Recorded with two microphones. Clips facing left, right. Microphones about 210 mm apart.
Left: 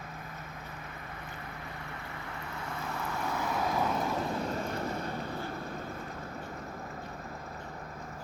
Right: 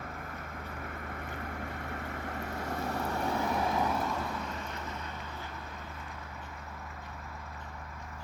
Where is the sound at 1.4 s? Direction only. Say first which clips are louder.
Right 4 dB; 50° right (ahead or behind); by 3.3 s 35° right (ahead or behind).